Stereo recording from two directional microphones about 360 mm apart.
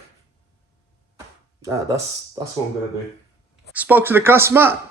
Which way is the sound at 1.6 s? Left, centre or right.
Centre.